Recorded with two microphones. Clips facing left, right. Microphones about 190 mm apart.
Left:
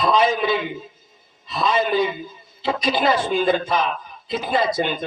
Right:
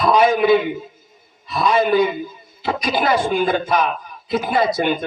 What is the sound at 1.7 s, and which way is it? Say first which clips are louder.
A man's voice: right 4 dB; 50° right (ahead or behind).